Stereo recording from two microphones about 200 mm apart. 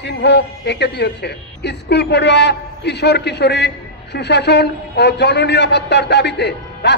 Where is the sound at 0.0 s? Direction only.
60° left (ahead or behind).